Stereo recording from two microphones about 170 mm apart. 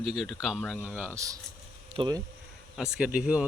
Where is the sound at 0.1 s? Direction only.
Centre (ahead or behind); by 2.2 s 25° right (ahead or behind).